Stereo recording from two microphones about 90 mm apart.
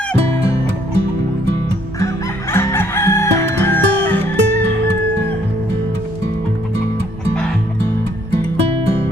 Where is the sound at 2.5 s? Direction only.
25° left (ahead or behind).